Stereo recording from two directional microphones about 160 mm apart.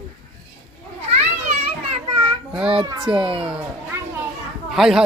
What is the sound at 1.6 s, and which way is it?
Children playing, 30° right (ahead or behind).